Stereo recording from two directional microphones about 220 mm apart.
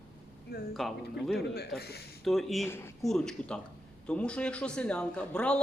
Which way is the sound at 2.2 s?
Centre (ahead or behind).